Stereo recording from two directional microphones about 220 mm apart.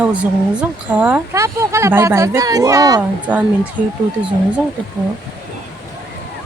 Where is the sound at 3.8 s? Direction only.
35° right (ahead or behind).